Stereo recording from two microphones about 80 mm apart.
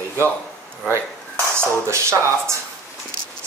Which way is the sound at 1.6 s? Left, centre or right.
Right.